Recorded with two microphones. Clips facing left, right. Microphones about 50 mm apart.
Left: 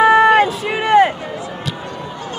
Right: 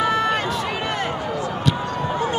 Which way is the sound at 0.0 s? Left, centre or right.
Left.